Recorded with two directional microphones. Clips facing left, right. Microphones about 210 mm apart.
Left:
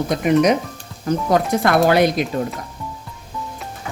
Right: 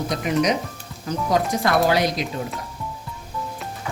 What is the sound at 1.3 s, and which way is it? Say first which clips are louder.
Speech: left 3 dB; 55° left (ahead or behind).